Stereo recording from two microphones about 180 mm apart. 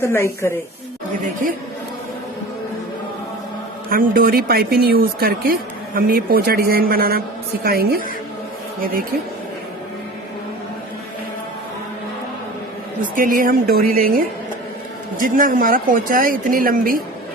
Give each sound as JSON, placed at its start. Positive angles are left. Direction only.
{"t": 0.0, "sound": "a woman's voice", "side_deg": 15}
{"t": 3.8, "sound": "a woman's voice", "side_deg": -55}
{"t": 13.0, "sound": "a woman's voice", "side_deg": -50}
{"t": 15.2, "sound": "a woman's voice", "side_deg": -50}